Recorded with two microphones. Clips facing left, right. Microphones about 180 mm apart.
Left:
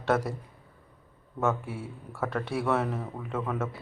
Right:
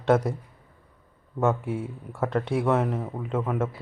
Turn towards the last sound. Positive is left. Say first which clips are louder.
# right 4 dB
turn(degrees=-15)  # may be behind; listen again after turning